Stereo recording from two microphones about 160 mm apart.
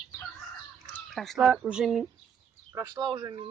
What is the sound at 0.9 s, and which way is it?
Speech, centre (ahead or behind).